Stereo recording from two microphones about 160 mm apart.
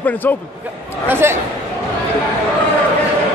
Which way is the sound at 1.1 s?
15° right (ahead or behind).